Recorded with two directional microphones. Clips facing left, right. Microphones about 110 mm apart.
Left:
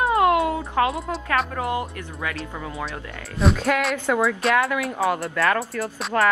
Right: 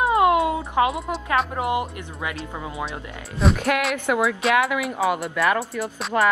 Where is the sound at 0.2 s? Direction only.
20° right (ahead or behind).